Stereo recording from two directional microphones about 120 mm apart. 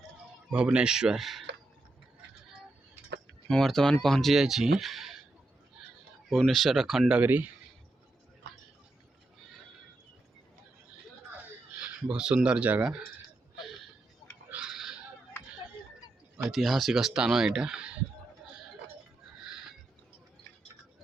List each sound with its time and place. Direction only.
0.5 s speech: 10° right (ahead or behind)
3.5 s speech: 5° left (ahead or behind)
6.3 s speech: centre (ahead or behind)
7.2 s speech: 15° right (ahead or behind)
11.8 s speech: 10° right (ahead or behind)
14.5 s a sound: 5° right (ahead or behind)
16.4 s speech: centre (ahead or behind)